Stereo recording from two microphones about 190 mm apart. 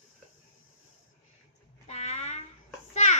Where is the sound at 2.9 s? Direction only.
35° left (ahead or behind).